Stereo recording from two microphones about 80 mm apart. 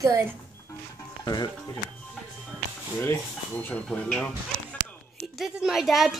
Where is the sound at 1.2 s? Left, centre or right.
Left.